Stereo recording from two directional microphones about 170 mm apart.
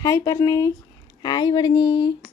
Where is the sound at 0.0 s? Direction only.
20° left (ahead or behind).